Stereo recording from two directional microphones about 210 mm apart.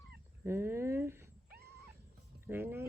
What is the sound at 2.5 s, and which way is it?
Speech, 10° right (ahead or behind).